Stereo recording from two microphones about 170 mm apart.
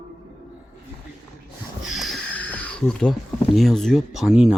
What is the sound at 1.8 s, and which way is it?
Sniff, centre (ahead or behind).